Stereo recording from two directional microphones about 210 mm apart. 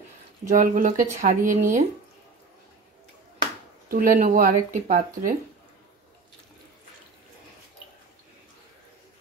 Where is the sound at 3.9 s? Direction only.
40° right (ahead or behind).